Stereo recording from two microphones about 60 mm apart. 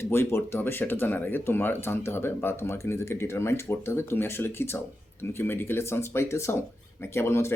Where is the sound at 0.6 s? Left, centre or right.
Left.